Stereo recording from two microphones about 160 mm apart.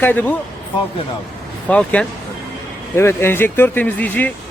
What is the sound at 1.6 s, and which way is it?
A man's voice, 10° left (ahead or behind).